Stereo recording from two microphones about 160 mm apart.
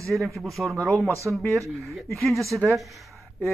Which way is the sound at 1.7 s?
Centre (ahead or behind).